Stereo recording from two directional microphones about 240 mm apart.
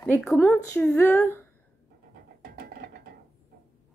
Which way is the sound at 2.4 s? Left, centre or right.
Right.